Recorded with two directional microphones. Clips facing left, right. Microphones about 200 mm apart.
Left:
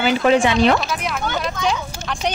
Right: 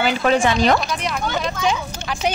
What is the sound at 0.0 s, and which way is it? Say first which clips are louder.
Speech: left 2 dB; 40° right (ahead or behind).